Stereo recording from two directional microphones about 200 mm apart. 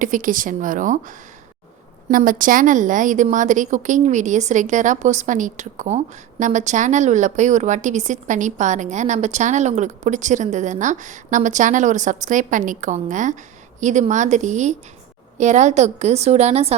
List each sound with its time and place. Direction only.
0.0 s a woman's voice: 40° right (ahead or behind)